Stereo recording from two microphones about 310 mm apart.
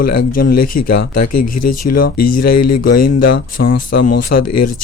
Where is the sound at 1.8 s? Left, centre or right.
Left.